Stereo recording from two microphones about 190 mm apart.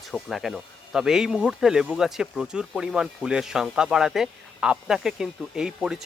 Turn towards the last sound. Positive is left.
turn(degrees=-5)  # may be behind; listen again after turning